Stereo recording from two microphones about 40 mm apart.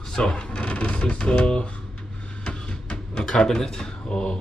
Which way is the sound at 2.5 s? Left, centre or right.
Left.